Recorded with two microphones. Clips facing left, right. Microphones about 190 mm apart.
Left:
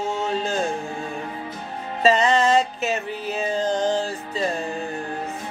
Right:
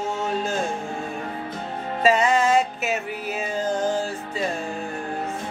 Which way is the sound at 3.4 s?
10° right (ahead or behind).